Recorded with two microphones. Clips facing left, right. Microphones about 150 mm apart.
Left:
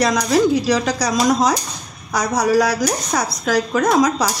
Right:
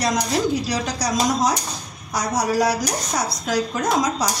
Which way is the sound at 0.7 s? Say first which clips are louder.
Left 6 dB; 90° left.